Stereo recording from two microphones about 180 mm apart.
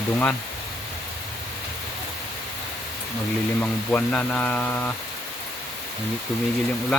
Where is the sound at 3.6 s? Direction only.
10° left (ahead or behind).